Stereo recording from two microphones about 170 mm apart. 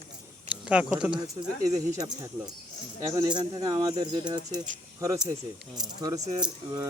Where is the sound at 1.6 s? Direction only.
20° right (ahead or behind).